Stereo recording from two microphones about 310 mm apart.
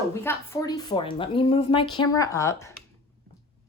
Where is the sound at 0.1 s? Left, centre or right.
Centre.